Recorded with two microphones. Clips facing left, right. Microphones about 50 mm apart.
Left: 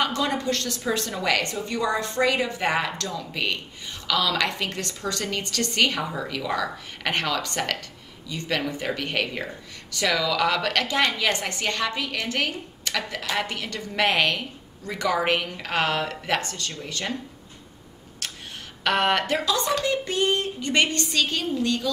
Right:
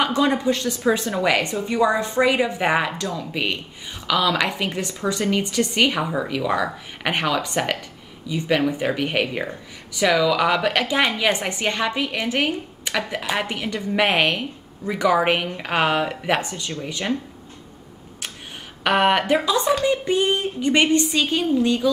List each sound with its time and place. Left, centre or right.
0.0 s speech: centre
18.9 s speech: centre